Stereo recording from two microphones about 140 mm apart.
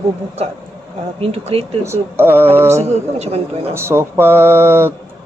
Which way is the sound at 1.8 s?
15° right (ahead or behind).